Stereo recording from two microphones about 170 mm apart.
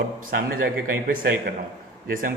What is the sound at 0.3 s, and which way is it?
A man's voice, 60° right (ahead or behind).